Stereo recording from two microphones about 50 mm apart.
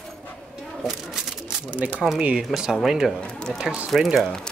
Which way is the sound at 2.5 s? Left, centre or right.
Centre.